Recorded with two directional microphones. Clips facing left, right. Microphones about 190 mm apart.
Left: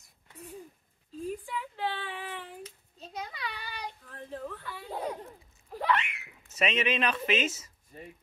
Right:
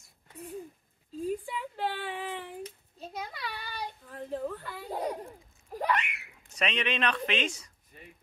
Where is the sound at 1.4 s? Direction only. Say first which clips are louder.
Right 1 dB; 10° right (ahead or behind).